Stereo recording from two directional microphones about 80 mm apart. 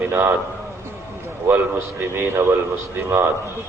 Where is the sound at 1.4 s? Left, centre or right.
Right.